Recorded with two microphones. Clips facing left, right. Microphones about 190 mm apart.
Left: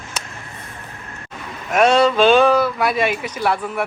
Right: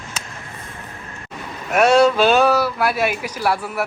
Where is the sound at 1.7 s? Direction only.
10° right (ahead or behind).